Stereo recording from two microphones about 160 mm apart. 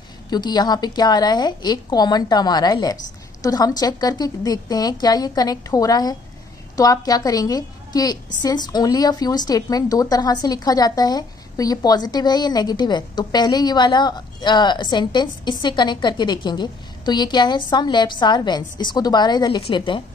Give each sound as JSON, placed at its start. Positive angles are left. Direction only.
{"t": 0.3, "sound": "a woman's voice", "side_deg": 25}